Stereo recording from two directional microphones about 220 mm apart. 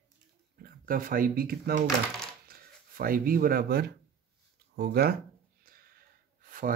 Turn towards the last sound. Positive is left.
turn(degrees=-40)  # may be behind; listen again after turning